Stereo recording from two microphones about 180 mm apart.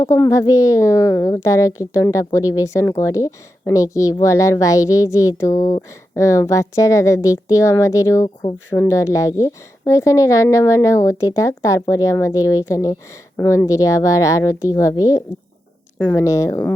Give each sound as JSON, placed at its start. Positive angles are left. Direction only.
{"t": 0.0, "sound": "speech", "side_deg": 15}